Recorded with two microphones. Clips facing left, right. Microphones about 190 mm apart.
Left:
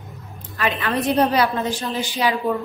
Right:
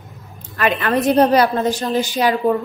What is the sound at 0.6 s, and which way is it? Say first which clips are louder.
Speech: right 4 dB; 55° right (ahead or behind).